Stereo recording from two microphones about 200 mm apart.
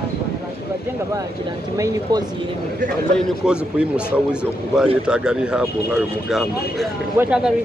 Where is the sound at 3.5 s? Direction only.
5° right (ahead or behind).